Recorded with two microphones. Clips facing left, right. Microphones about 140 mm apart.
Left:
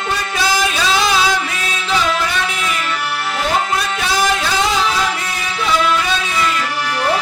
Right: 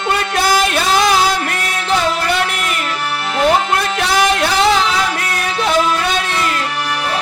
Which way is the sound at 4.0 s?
70° right (ahead or behind).